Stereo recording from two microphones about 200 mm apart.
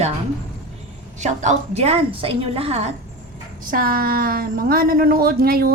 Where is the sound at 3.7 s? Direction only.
45° right (ahead or behind).